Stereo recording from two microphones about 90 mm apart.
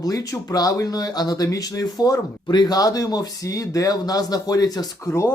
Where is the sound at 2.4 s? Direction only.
55° left (ahead or behind).